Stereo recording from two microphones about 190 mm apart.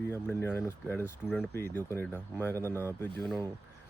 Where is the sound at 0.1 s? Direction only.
10° left (ahead or behind).